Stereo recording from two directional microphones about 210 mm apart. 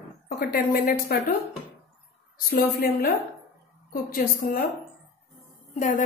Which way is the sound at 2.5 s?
45° left (ahead or behind).